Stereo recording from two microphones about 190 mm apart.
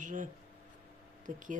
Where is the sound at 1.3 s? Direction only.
45° right (ahead or behind).